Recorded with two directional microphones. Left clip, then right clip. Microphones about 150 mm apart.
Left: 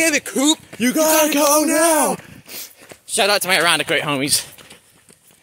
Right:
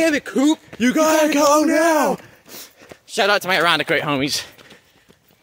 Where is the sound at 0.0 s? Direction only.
40° right (ahead or behind).